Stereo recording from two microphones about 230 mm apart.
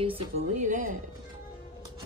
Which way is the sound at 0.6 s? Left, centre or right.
Right.